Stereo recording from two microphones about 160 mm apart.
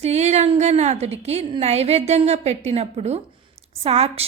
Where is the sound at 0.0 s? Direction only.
45° right (ahead or behind).